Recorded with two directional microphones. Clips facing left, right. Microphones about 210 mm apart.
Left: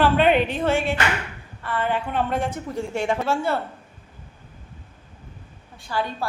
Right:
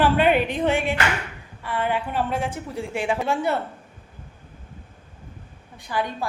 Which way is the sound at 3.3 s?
20° right (ahead or behind).